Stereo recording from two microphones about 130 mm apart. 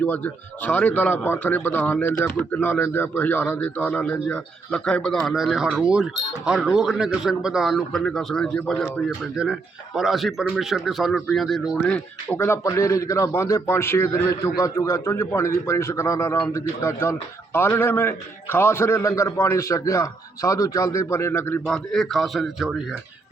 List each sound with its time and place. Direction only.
0.0 s a man's voice: 10° left (ahead or behind)
11.9 s a man's voice: 10° left (ahead or behind)
21.7 s a man's voice: centre (ahead or behind)